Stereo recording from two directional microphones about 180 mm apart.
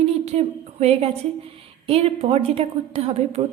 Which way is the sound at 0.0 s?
35° right (ahead or behind).